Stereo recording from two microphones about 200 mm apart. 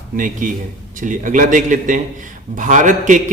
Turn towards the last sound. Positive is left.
turn(degrees=-40)  # may be behind; listen again after turning